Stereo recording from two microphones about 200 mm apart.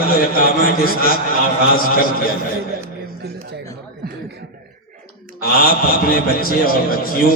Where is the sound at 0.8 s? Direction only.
45° left (ahead or behind).